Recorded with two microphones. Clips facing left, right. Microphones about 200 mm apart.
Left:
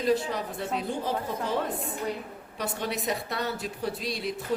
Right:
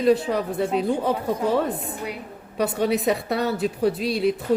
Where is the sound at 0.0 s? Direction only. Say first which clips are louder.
Right 7 dB; 70° right (ahead or behind).